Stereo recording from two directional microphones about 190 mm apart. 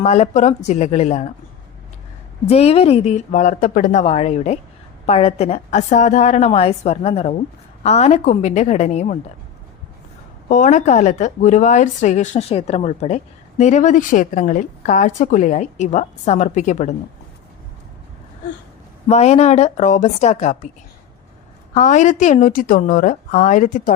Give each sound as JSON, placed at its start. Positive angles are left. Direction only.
{"t": 0.0, "sound": "a woman's voice", "side_deg": 35}
{"t": 2.5, "sound": "a woman's voice", "side_deg": 35}
{"t": 10.5, "sound": "a woman's voice", "side_deg": 40}
{"t": 19.0, "sound": "a woman's voice", "side_deg": 35}
{"t": 21.8, "sound": "a woman's voice", "side_deg": 40}